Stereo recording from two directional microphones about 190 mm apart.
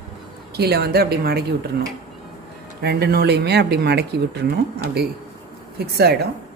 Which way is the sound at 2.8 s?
60° right (ahead or behind).